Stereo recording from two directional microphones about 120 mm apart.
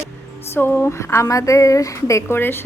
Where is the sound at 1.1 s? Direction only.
25° left (ahead or behind).